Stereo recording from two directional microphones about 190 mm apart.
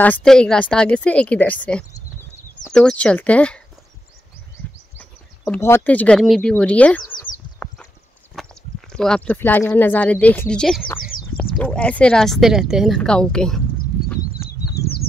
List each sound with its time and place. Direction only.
0.0 s speech: 5° left (ahead or behind)
4.9 s speech: 10° left (ahead or behind)
8.9 s speech: 5° left (ahead or behind)
11.0 s a sound: 50° left (ahead or behind)
11.3 s speech: 5° left (ahead or behind)
14.8 s bird flight: 55° left (ahead or behind)